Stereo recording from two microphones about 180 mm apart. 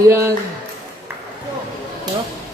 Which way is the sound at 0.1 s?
15° right (ahead or behind).